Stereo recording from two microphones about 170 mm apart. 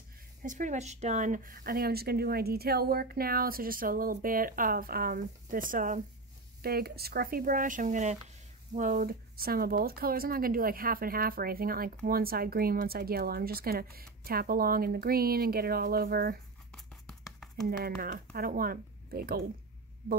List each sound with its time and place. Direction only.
0.4 s speech: 50° right (ahead or behind)
6.6 s speech: 65° right (ahead or behind)
16.7 s a sound: 5° left (ahead or behind)
17.6 s speech: 65° right (ahead or behind)